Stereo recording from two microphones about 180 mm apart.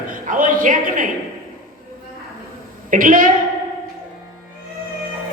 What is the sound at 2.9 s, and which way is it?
Speech, 50° right (ahead or behind).